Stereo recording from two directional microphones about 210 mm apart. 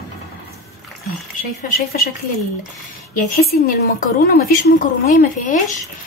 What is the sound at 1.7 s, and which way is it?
Speech, 45° left (ahead or behind).